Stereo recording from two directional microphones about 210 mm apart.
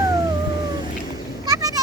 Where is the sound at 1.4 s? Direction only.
15° right (ahead or behind).